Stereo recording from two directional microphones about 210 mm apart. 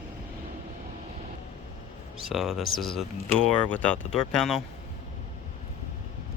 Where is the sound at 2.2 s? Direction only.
Centre (ahead or behind).